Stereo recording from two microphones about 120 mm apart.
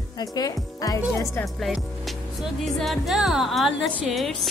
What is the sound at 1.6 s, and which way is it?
Speech, centre (ahead or behind).